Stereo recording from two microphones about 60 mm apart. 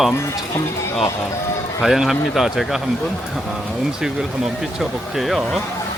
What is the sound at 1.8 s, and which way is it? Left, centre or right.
Speech, centre.